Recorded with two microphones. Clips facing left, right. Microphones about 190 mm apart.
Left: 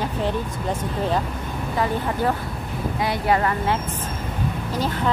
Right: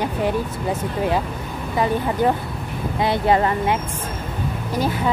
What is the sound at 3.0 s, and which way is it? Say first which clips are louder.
Speech: right 4 dB; 25° right (ahead or behind).